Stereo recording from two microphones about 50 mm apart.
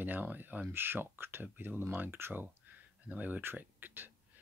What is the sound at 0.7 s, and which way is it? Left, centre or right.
Speech, right.